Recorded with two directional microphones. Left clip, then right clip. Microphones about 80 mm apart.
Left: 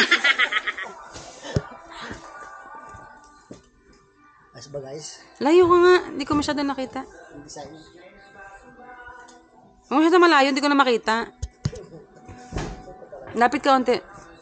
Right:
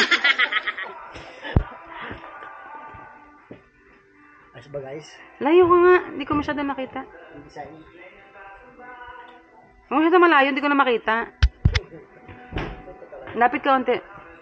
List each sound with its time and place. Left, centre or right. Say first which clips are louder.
0.0 s snicker: even; centre
5.4 s a woman's voice: even; left
9.8 s a woman's voice: even; left
13.3 s a woman's voice: even; left